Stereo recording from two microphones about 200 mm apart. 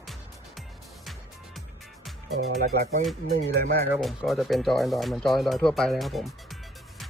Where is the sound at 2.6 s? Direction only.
40° right (ahead or behind).